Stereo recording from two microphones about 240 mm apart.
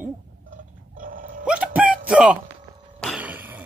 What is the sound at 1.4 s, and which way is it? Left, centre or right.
Music, centre.